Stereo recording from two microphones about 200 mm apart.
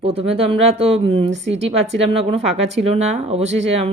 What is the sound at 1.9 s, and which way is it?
Speech, 30° right (ahead or behind).